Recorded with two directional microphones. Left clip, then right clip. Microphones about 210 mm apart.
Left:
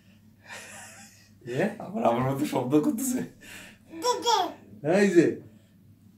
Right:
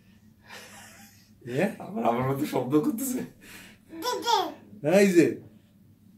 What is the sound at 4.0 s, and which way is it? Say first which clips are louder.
Speech: left 1 dB; centre (ahead or behind).